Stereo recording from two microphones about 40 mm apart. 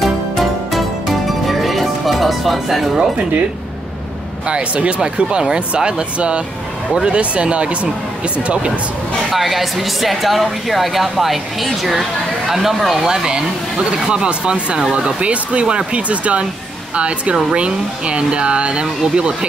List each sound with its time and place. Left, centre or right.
0.0 s music: centre
4.5 s speech: right
9.3 s speech: centre; by 19.3 s right